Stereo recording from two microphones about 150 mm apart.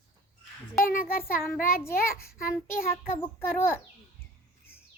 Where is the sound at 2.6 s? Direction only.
80° left.